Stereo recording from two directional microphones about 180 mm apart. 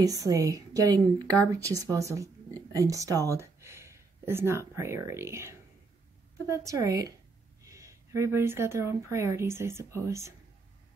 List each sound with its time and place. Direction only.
0.0 s a woman's voice: 20° right (ahead or behind)